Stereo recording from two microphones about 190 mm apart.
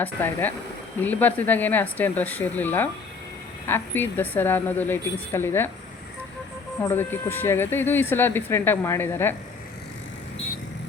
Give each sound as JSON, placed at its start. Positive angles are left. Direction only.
{"t": 0.0, "sound": "a woman's voice", "side_deg": 10}
{"t": 6.8, "sound": "a woman's voice", "side_deg": 10}